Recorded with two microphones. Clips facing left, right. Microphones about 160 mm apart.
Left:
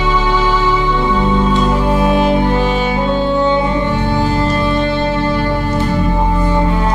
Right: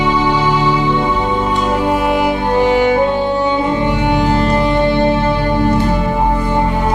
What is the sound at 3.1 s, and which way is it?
Music, 15° right (ahead or behind).